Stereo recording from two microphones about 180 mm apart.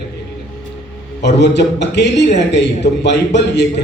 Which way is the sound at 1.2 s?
70° left (ahead or behind).